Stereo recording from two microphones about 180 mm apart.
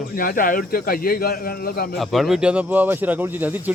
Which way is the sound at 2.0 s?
Centre (ahead or behind).